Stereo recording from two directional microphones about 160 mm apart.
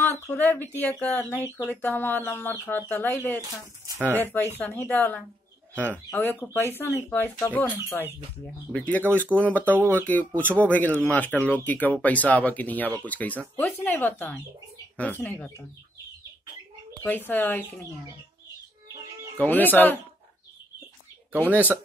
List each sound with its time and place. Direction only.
0.0 s speech: 10° left (ahead or behind)
0.7 s chicken: 10° left (ahead or behind)
3.3 s speech: 25° right (ahead or behind)
4.2 s chicken: 15° left (ahead or behind)
9.7 s speech: 15° right (ahead or behind)
10.0 s chicken: 10° left (ahead or behind)
17.3 s chicken: 10° left (ahead or behind)
19.3 s chicken: 10° left (ahead or behind)
21.5 s speech: 10° right (ahead or behind)